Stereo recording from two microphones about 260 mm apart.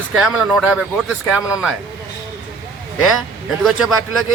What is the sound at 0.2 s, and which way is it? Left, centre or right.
Speech, centre.